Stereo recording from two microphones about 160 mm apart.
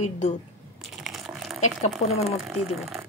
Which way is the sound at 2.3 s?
Centre (ahead or behind).